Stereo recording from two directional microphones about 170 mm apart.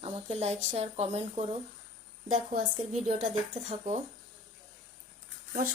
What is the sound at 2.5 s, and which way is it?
A woman's voice, 40° right (ahead or behind).